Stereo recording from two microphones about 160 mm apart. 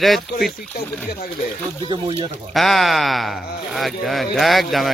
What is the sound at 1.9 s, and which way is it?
Speech, 35° right (ahead or behind).